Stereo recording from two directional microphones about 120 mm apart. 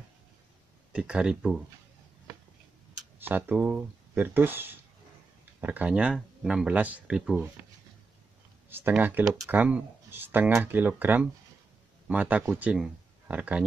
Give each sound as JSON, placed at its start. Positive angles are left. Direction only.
{"t": 0.9, "sound": "speech", "side_deg": -10}
{"t": 3.2, "sound": "speech", "side_deg": -15}
{"t": 8.6, "sound": "speech", "side_deg": -15}